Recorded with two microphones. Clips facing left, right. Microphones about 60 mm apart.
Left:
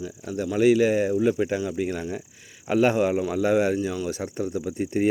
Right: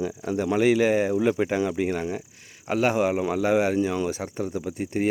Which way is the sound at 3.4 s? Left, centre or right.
Centre.